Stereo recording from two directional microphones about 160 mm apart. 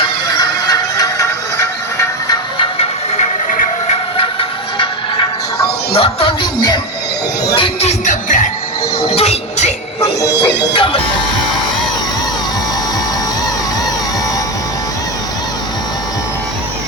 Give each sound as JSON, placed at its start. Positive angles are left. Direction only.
{"t": 0.3, "sound": "music", "side_deg": 25}
{"t": 2.3, "sound": "music", "side_deg": 30}
{"t": 5.9, "sound": "music", "side_deg": 35}
{"t": 7.5, "sound": "music", "side_deg": 35}
{"t": 9.1, "sound": "train", "side_deg": 40}
{"t": 10.2, "sound": "music", "side_deg": 90}
{"t": 10.8, "sound": "speech", "side_deg": 35}